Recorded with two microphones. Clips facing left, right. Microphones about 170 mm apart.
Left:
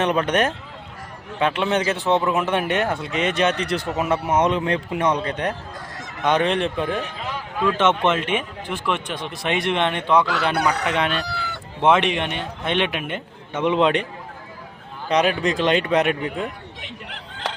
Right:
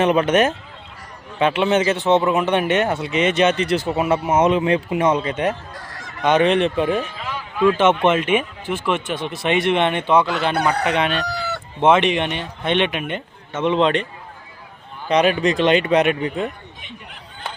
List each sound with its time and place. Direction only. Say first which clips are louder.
0.0 s speech: right 4 dB; 5° right (ahead or behind)
10.5 s speech: right 1 dB; 50° right (ahead or behind)
10.8 s speech: right 2 dB; centre (ahead or behind)
15.1 s speech: right 3 dB; centre (ahead or behind)
16.8 s fowl: left 2 dB; 90° left